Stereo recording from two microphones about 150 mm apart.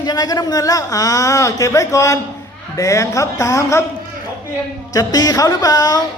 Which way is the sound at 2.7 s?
20° left (ahead or behind).